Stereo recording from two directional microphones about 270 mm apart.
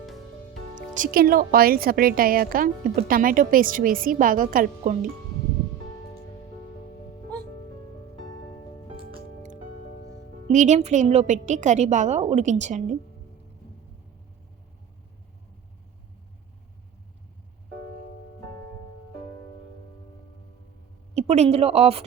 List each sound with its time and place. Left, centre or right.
0.9 s a woman's voice: right
9.4 s music: right
10.5 s a woman's voice: right
21.2 s a woman's voice: right